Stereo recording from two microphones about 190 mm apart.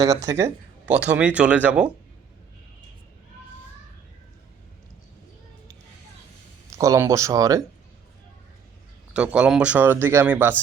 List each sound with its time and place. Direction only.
0.3 s speech: 10° right (ahead or behind)
6.7 s speech: 15° right (ahead or behind)
9.1 s speech: 5° right (ahead or behind)